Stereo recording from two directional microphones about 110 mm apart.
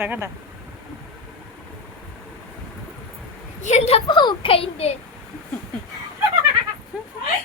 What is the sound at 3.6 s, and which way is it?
Speech, 80° left.